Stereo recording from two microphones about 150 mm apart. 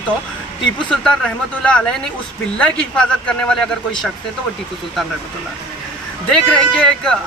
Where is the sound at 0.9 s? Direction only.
5° left (ahead or behind).